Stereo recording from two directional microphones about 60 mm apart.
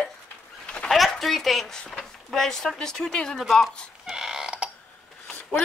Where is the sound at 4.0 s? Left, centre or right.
Centre.